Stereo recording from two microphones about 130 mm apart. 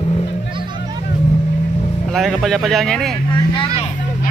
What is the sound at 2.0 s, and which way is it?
Speech, centre (ahead or behind).